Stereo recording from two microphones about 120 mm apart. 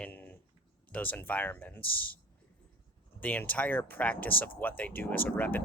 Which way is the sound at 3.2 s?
15° left (ahead or behind).